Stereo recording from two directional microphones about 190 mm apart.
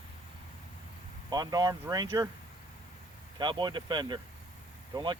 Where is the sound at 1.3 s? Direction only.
20° right (ahead or behind).